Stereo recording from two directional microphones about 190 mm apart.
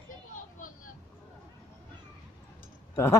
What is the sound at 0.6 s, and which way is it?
Vehicle, 45° left (ahead or behind).